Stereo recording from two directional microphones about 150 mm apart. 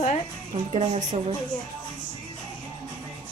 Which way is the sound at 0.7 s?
45° right (ahead or behind).